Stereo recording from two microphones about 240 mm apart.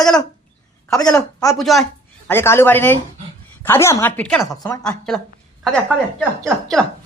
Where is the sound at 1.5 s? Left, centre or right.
Centre.